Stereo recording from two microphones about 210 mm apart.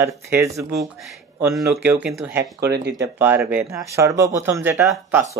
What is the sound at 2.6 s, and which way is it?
Speech, 50° right (ahead or behind).